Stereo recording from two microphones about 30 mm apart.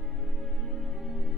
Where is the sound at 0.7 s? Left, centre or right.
Centre.